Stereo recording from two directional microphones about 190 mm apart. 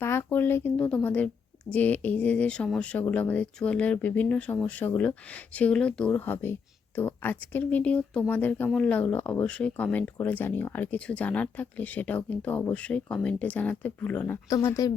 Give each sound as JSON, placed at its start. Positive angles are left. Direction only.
{"t": 0.0, "sound": "speech", "side_deg": 10}